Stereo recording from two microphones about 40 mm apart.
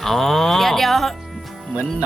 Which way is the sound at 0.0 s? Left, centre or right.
Centre.